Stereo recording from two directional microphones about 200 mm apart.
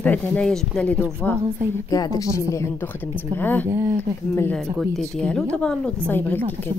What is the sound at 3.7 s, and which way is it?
Speech, 15° right (ahead or behind).